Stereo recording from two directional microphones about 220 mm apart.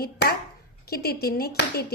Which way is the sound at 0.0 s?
45° left (ahead or behind).